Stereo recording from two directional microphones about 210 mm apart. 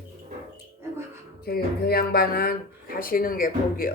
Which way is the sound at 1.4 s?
45° left (ahead or behind).